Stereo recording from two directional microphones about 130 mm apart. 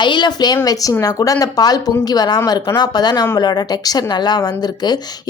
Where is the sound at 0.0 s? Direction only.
35° left (ahead or behind).